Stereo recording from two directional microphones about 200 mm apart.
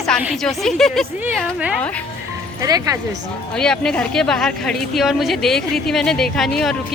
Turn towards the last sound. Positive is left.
turn(degrees=0)  # may be behind; listen again after turning